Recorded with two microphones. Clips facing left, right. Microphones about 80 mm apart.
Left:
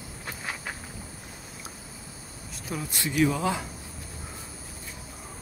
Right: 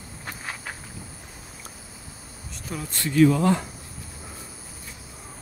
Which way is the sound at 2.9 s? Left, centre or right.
Centre.